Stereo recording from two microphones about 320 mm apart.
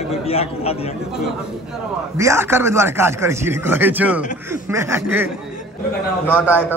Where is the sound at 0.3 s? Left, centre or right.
Centre.